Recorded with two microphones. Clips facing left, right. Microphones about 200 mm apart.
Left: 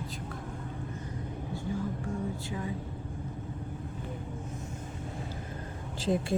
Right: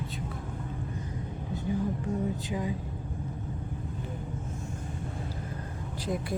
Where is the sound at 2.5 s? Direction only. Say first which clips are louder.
Right 4 dB; 15° right (ahead or behind).